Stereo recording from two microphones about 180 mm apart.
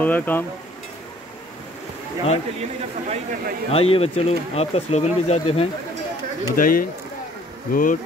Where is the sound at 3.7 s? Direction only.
30° left (ahead or behind).